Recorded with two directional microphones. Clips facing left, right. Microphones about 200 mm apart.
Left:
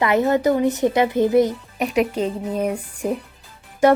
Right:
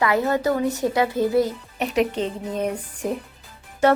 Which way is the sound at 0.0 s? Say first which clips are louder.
Left 3 dB; 20° left (ahead or behind).